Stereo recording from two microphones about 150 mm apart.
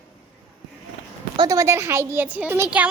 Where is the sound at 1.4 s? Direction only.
20° right (ahead or behind).